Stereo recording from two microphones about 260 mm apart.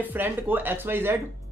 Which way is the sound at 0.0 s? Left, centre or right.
Centre.